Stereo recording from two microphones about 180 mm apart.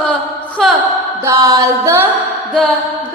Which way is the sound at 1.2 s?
15° right (ahead or behind).